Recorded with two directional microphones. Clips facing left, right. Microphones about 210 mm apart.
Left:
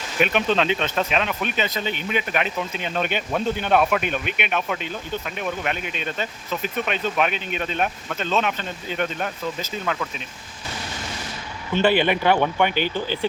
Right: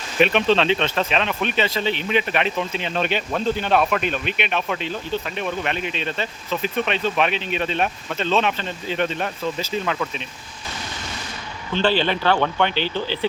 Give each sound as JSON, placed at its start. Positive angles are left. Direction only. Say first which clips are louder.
{"t": 0.2, "sound": "speech", "louder": "right 3 dB", "side_deg": 10}
{"t": 7.3, "sound": "speech", "louder": "right 3 dB", "side_deg": 50}
{"t": 7.8, "sound": "speech", "louder": "right 2 dB", "side_deg": 5}
{"t": 11.7, "sound": "speech", "louder": "left 1 dB", "side_deg": 10}